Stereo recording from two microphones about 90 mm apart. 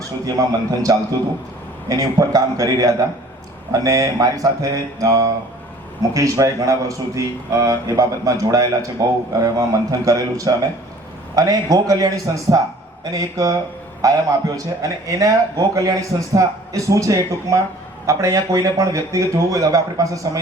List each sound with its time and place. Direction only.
0.3 s a man's voice: 40° right (ahead or behind)